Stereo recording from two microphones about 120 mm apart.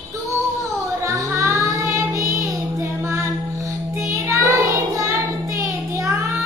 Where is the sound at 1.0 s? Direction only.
25° right (ahead or behind).